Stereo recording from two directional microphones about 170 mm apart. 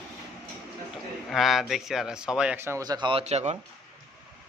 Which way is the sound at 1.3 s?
Centre (ahead or behind).